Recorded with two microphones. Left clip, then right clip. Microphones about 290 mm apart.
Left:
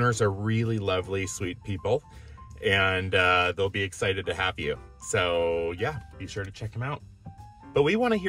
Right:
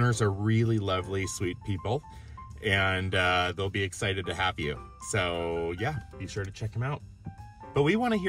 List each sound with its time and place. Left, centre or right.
0.1 s speech: centre